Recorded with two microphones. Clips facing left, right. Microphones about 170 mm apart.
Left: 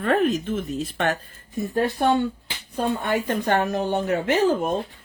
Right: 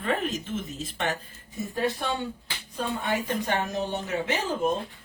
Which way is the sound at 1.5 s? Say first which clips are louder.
Left 5 dB; 50° left (ahead or behind).